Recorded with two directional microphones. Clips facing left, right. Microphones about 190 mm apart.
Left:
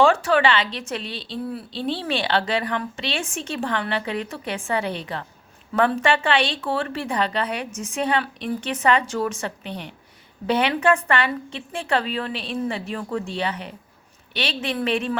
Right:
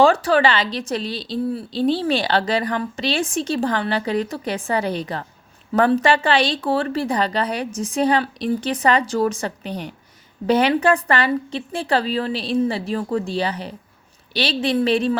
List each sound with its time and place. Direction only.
0.0 s a woman's voice: 35° right (ahead or behind)